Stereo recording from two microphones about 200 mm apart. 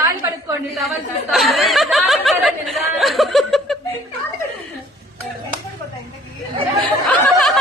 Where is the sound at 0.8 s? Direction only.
Centre (ahead or behind).